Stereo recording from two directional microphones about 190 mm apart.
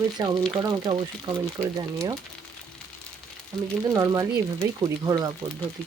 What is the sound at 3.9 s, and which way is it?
Speech, 20° right (ahead or behind).